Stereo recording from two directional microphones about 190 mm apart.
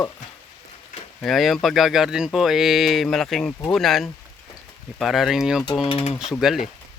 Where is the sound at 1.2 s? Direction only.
Centre (ahead or behind).